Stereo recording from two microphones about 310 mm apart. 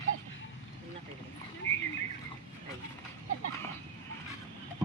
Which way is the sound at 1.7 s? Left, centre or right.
Centre.